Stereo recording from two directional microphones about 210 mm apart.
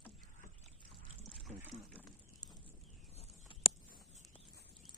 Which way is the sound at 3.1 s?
30° left (ahead or behind).